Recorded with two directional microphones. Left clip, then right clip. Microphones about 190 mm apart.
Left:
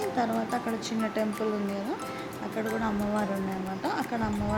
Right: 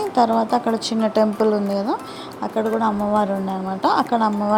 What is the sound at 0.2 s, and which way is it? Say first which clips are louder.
Speech: right 15 dB; 25° right (ahead or behind).